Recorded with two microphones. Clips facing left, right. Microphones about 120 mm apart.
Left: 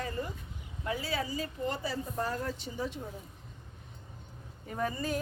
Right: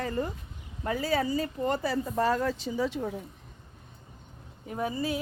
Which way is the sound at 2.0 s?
90° right.